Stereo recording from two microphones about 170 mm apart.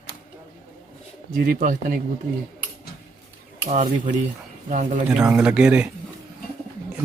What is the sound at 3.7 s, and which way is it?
Speech, 45° right (ahead or behind).